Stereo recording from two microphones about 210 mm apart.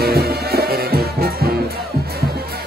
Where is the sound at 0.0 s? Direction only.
50° right (ahead or behind).